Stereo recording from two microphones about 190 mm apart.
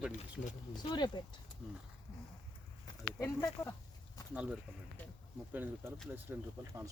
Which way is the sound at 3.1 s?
15° left (ahead or behind).